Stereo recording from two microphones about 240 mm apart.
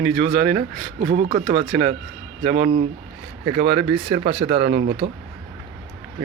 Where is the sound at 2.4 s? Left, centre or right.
Right.